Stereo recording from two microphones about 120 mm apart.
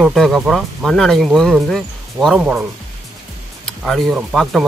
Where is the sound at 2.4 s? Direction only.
10° right (ahead or behind).